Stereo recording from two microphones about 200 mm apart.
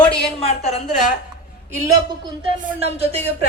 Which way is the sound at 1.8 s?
20° right (ahead or behind).